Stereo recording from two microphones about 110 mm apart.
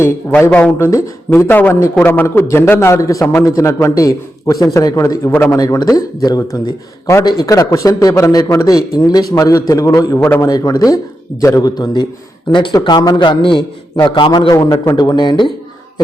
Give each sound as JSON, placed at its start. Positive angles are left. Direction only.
{"t": 0.0, "sound": "a man's voice", "side_deg": 20}
{"t": 0.9, "sound": "a man's voice", "side_deg": 30}
{"t": 5.5, "sound": "speech", "side_deg": 35}
{"t": 12.5, "sound": "a man's voice", "side_deg": 45}